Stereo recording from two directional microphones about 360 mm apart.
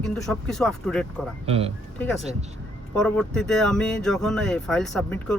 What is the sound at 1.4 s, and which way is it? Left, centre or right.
Speech, centre.